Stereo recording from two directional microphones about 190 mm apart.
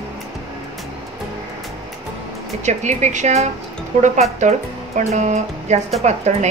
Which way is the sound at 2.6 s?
40° right (ahead or behind).